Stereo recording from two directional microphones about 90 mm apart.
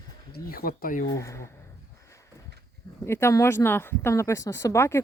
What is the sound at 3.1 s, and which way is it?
Speech, 30° left (ahead or behind).